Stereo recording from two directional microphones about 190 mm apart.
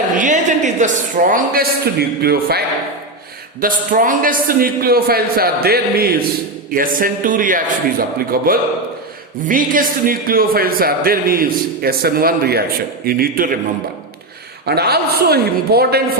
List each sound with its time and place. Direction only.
0.1 s a man's voice: 40° right (ahead or behind)
3.6 s a man's voice: 45° right (ahead or behind)
14.6 s a woman's voice: 55° right (ahead or behind)